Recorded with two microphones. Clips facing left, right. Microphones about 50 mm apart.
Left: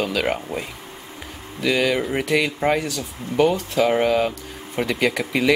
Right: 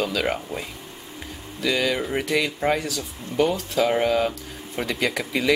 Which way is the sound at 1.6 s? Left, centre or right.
Centre.